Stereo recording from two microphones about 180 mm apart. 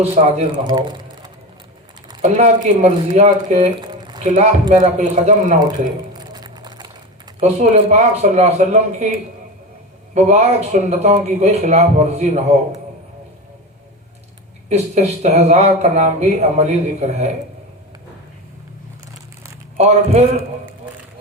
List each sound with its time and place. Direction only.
0.0 s speech: 35° right (ahead or behind)
0.5 s speech: 25° right (ahead or behind)
2.2 s speech: 40° right (ahead or behind)
3.8 s squish: 25° right (ahead or behind)
4.7 s speech: 40° right (ahead or behind)
6.1 s a sound: 25° right (ahead or behind)
7.3 s speech: 40° right (ahead or behind)
10.2 s speech: 40° right (ahead or behind)
14.7 s speech: 35° right (ahead or behind)
19.7 s speech: 40° right (ahead or behind)